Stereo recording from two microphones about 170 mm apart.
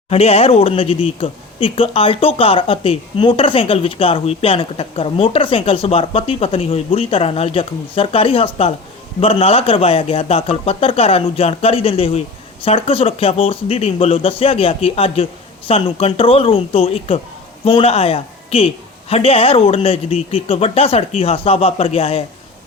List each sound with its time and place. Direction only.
0.1 s speech: 35° left (ahead or behind)